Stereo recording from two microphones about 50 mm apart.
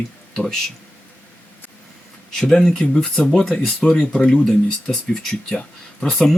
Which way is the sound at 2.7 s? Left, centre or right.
Left.